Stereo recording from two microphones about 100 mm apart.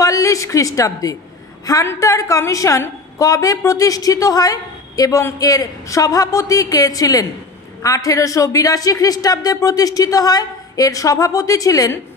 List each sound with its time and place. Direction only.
0.0 s a woman's voice: 35° left (ahead or behind)